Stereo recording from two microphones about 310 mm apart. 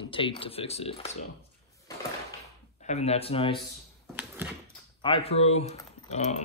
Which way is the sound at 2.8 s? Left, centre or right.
Left.